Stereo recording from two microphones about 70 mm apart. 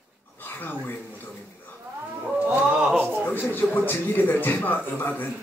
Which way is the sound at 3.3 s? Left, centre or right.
Left.